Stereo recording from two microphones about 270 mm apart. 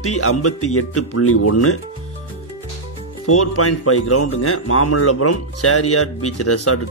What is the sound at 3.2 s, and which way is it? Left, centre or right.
Speech, left.